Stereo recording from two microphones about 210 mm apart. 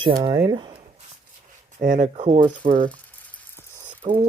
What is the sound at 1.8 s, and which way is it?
Speech, 35° right (ahead or behind).